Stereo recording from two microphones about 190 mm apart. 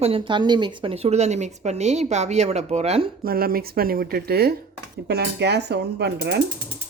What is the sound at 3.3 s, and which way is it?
A woman's voice, 50° right (ahead or behind).